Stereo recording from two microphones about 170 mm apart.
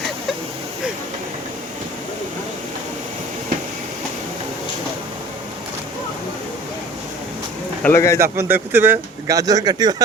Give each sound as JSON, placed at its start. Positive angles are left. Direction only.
{"t": 7.8, "sound": "speech", "side_deg": 15}
{"t": 8.2, "sound": "speech", "side_deg": -15}